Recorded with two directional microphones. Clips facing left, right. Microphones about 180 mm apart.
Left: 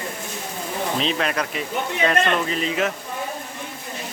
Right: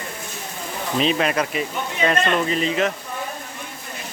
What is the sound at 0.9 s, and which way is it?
Speech, 5° right (ahead or behind).